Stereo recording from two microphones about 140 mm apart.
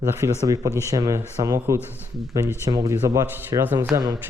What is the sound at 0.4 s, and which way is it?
A man's voice, 25° right (ahead or behind).